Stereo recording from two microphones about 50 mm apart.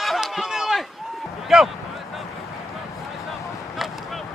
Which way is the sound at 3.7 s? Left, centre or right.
Centre.